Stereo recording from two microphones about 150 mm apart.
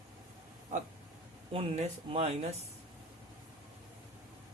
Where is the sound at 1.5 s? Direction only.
40° right (ahead or behind).